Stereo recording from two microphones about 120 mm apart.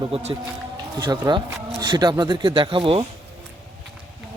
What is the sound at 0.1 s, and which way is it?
Speech, 65° right (ahead or behind).